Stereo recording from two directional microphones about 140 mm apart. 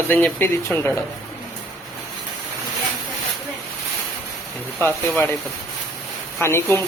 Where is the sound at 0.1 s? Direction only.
10° left (ahead or behind).